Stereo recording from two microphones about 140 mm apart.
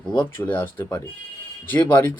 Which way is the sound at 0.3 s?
15° left (ahead or behind).